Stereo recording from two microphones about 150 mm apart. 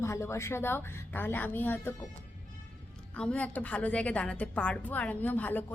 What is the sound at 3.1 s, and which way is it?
A woman's voice, 10° left (ahead or behind).